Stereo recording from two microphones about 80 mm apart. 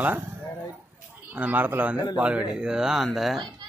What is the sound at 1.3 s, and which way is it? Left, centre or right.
Speech, right.